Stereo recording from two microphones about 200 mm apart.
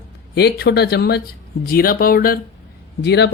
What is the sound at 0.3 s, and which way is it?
Speech, 55° left (ahead or behind).